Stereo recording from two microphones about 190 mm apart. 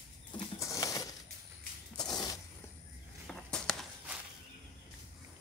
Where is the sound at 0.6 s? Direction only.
15° left (ahead or behind).